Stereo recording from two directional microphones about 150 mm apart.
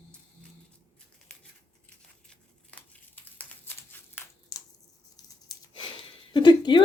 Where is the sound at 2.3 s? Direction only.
10° left (ahead or behind).